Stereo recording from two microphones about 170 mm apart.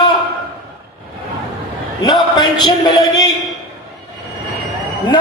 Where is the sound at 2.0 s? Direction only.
25° left (ahead or behind).